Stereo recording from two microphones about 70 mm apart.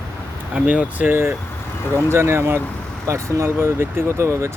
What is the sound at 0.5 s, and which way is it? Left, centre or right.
Speech, right.